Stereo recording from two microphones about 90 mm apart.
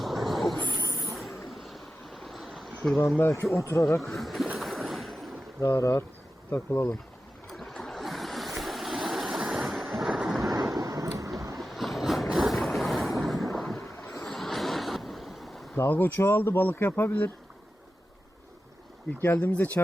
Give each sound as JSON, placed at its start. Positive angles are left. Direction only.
{"t": 0.0, "sound": "a sound", "side_deg": 0}
{"t": 1.0, "sound": "vehicle", "side_deg": 0}
{"t": 1.6, "sound": "stream", "side_deg": 0}
{"t": 3.2, "sound": "speech", "side_deg": 25}
{"t": 4.0, "sound": "speech", "side_deg": 0}
{"t": 4.5, "sound": "a sound", "side_deg": 0}
{"t": 5.5, "sound": "speech", "side_deg": 35}
{"t": 7.5, "sound": "waves", "side_deg": 5}
{"t": 10.8, "sound": "a sound", "side_deg": -40}
{"t": 11.5, "sound": "vehicle", "side_deg": 0}
{"t": 14.2, "sound": "a sound", "side_deg": 5}
{"t": 15.7, "sound": "speech", "side_deg": 20}
{"t": 19.2, "sound": "speech", "side_deg": 20}